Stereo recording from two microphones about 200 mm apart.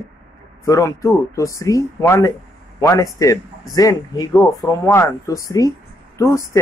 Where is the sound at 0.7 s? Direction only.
15° left (ahead or behind).